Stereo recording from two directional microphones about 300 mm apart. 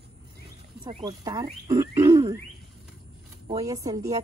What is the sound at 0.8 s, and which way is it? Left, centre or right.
Speech, centre.